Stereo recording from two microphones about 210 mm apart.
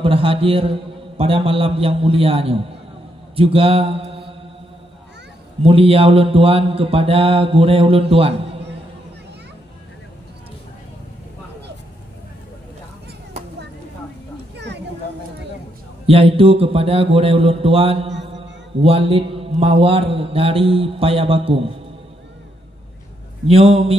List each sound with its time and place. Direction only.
0.0 s mantra: 25° right (ahead or behind)
5.6 s mantra: 25° right (ahead or behind)
16.1 s mantra: 25° right (ahead or behind)
23.4 s mantra: 25° right (ahead or behind)